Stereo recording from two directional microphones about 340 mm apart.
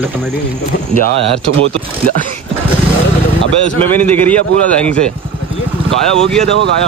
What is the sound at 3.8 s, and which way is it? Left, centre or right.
Speech, centre.